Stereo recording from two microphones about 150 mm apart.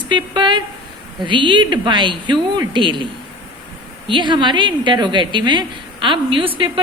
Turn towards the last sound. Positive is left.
turn(degrees=-35)  # may be behind; listen again after turning